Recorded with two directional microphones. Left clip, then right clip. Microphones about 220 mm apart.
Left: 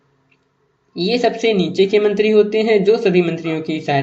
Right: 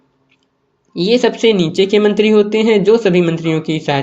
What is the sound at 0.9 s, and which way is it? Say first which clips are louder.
Speech: right 4 dB; 35° right (ahead or behind).